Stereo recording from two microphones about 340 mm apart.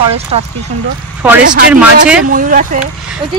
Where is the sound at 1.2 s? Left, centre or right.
Centre.